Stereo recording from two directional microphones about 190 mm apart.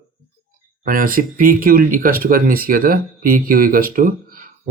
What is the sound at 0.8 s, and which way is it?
Speech, 45° right (ahead or behind).